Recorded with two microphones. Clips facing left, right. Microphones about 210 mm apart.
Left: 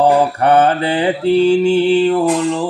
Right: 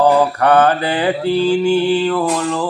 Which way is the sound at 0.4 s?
25° left (ahead or behind).